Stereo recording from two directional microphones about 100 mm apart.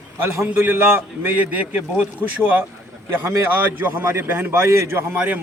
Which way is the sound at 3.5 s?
20° right (ahead or behind).